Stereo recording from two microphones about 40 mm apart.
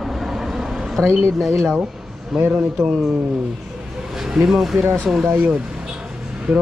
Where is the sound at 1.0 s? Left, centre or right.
Left.